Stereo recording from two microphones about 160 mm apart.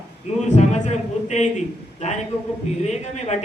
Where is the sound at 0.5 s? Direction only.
45° left (ahead or behind).